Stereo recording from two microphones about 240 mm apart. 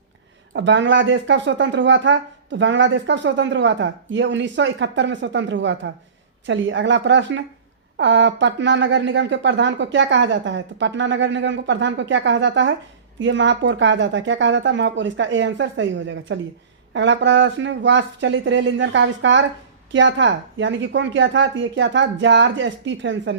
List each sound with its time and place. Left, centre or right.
0.5 s speech: right